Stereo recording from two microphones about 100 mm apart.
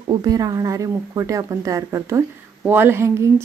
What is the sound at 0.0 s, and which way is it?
A woman's voice, 45° right (ahead or behind).